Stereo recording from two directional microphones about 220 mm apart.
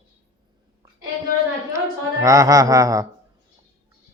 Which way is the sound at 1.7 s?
15° right (ahead or behind).